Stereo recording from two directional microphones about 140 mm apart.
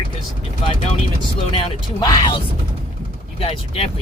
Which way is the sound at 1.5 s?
30° left (ahead or behind).